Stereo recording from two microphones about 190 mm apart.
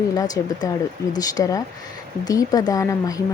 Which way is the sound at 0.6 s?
20° left (ahead or behind).